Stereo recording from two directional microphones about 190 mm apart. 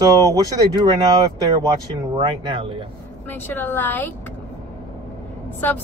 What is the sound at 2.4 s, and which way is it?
Speech, 30° right (ahead or behind).